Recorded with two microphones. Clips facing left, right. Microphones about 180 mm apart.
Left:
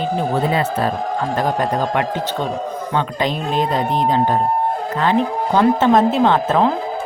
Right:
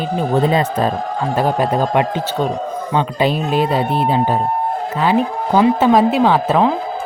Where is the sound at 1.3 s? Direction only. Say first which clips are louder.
Right 4 dB; 10° right (ahead or behind).